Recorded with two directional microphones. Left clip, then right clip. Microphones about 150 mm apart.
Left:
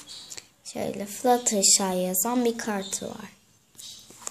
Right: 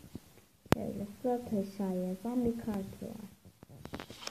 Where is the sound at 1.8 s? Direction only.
40° left (ahead or behind).